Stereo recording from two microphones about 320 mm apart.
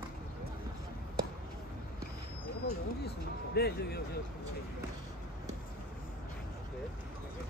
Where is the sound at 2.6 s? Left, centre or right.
Left.